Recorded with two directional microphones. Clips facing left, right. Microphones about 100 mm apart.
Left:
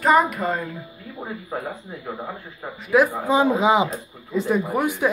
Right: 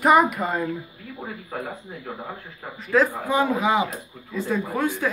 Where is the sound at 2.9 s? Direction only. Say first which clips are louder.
Left 3 dB; 15° left (ahead or behind).